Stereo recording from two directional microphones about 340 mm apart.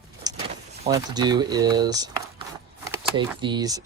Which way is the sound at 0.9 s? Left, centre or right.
Centre.